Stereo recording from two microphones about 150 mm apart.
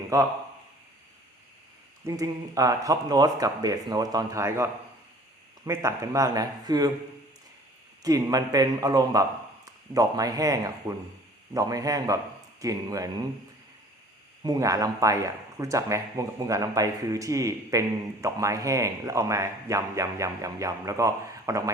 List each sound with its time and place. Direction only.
0.1 s a man's voice: 20° right (ahead or behind)
2.0 s a man's voice: 25° right (ahead or behind)
8.0 s a man's voice: 25° right (ahead or behind)
14.4 s a man's voice: 25° right (ahead or behind)